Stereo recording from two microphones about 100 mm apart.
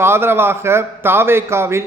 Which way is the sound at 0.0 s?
25° right (ahead or behind).